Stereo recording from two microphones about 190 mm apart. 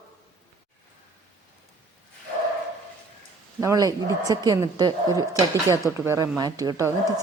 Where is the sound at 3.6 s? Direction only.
20° right (ahead or behind).